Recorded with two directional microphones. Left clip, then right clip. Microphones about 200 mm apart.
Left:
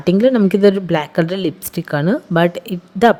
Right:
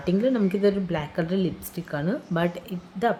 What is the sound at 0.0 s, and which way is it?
Speech, 50° left (ahead or behind).